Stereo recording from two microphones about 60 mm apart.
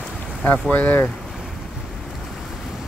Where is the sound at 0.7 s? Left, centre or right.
Left.